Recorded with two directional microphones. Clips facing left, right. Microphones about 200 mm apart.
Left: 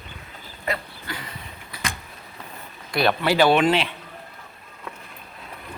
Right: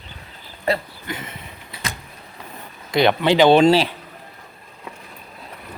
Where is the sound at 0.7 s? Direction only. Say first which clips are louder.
Right 7 dB; 30° right (ahead or behind).